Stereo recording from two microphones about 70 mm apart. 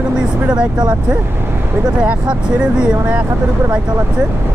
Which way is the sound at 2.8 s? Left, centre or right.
Centre.